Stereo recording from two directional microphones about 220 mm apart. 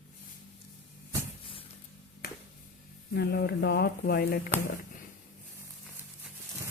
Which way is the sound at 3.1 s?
50° left (ahead or behind).